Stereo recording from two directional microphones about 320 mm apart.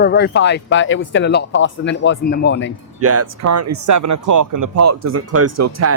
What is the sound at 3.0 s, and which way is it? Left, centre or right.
Speech, right.